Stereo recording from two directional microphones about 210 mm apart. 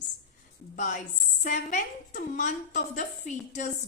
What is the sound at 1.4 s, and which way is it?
A woman's voice, 35° left (ahead or behind).